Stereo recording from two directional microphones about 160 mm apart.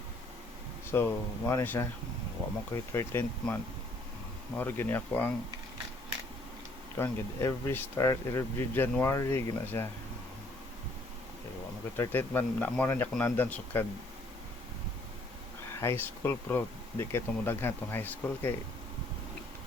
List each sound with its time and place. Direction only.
0.9 s speech: 15° left (ahead or behind)
6.9 s speech: 15° left (ahead or behind)
11.9 s speech: 15° left (ahead or behind)
15.7 s speech: 15° left (ahead or behind)